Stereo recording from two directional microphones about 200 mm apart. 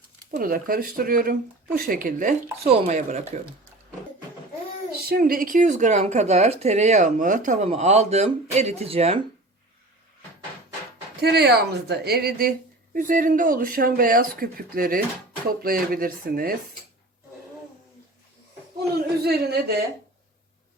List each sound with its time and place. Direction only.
0.3 s a woman's voice: 50° right (ahead or behind)
5.0 s a woman's voice: 45° right (ahead or behind); by 9.2 s 30° right (ahead or behind)
11.2 s a woman's voice: 55° right (ahead or behind)
19.2 s a woman's voice: 50° right (ahead or behind)